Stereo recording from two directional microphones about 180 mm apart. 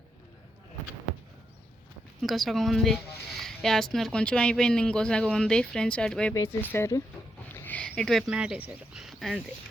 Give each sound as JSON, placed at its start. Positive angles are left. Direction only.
{"t": 2.2, "sound": "speech", "side_deg": 0}